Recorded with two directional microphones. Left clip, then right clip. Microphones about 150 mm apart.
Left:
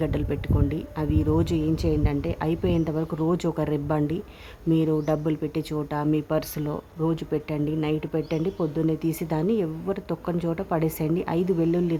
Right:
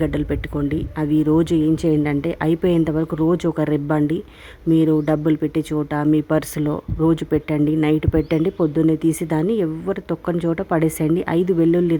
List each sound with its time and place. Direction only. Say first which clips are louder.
0.0 s speech: right 6 dB; 25° right (ahead or behind)